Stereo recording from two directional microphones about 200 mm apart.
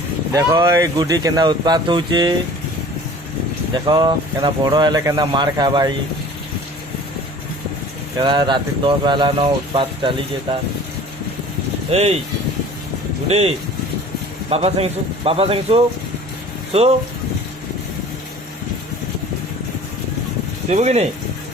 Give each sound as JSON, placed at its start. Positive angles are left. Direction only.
{"t": 0.3, "sound": "speech", "side_deg": -15}
{"t": 3.8, "sound": "speech", "side_deg": -20}
{"t": 8.2, "sound": "speech", "side_deg": -25}
{"t": 11.9, "sound": "speech", "side_deg": -30}
{"t": 14.5, "sound": "speech", "side_deg": -30}
{"t": 20.7, "sound": "speech", "side_deg": -35}